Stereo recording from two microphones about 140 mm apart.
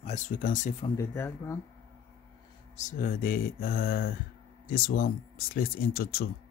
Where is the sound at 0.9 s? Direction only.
15° left (ahead or behind).